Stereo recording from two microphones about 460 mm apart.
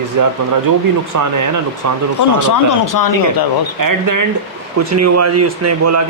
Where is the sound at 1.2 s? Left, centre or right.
Right.